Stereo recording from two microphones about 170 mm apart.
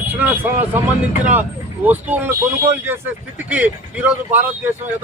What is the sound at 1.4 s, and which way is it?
A man's voice, 10° right (ahead or behind).